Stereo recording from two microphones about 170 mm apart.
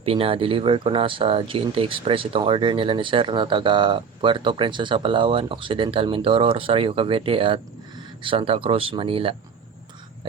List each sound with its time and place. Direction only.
0.0 s speech: 35° right (ahead or behind)